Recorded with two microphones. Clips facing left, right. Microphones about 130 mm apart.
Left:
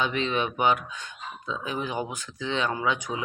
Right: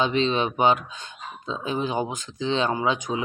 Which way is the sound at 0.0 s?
25° right (ahead or behind).